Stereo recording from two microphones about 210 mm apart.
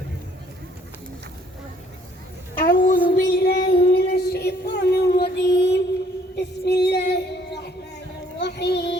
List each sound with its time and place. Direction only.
2.6 s child singing: 45° left (ahead or behind)
6.3 s female singing: 55° left (ahead or behind)
8.4 s child singing: 55° left (ahead or behind)